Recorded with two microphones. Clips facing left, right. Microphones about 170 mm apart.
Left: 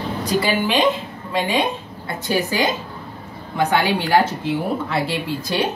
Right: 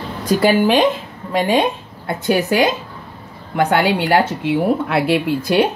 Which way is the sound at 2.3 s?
65° right (ahead or behind).